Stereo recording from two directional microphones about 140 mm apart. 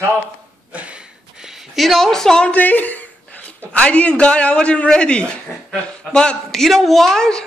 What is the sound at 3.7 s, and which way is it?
A man's voice, 10° left (ahead or behind).